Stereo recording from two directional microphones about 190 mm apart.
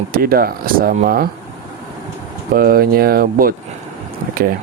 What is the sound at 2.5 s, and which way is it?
Speech, 50° right (ahead or behind).